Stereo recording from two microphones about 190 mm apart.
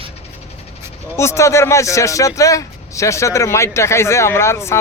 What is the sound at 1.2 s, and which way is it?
Speech, 15° left (ahead or behind).